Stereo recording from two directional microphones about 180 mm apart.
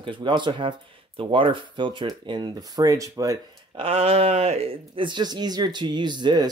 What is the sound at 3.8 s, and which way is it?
Speech, 35° right (ahead or behind).